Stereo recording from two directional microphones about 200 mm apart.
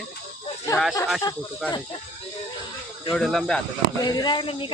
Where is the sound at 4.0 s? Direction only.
20° left (ahead or behind).